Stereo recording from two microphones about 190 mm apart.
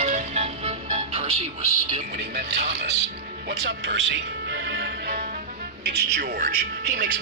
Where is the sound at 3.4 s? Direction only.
65° right (ahead or behind).